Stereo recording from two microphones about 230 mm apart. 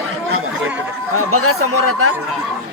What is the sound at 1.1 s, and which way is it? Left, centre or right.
Speech, right.